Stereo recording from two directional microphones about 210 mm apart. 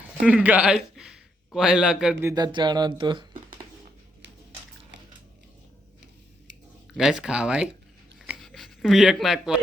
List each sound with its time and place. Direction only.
0.2 s a man's voice: 5° right (ahead or behind)
2.3 s speech: 20° right (ahead or behind)
6.9 s speech: 5° right (ahead or behind)
8.3 s writing: centre (ahead or behind)